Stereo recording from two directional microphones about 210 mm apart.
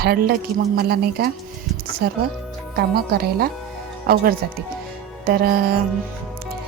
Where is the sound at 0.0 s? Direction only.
50° right (ahead or behind).